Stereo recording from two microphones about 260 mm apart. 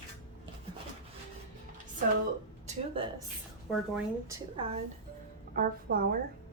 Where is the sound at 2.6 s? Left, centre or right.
Right.